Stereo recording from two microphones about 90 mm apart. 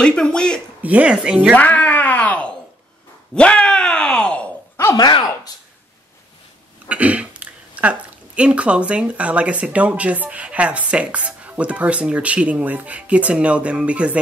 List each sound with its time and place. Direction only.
0.0 s speech: 10° left (ahead or behind)
0.8 s speech: 15° right (ahead or behind)
1.5 s groan: 15° left (ahead or behind)
6.9 s speech: 15° right (ahead or behind)